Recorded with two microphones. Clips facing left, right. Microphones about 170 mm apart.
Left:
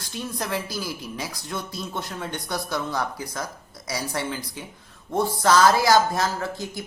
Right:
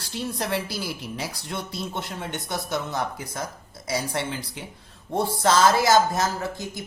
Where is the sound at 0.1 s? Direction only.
30° right (ahead or behind).